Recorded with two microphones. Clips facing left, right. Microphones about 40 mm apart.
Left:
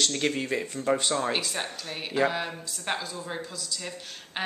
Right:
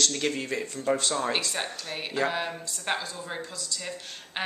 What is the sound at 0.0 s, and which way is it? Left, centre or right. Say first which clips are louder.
Speech: left 1 dB; centre.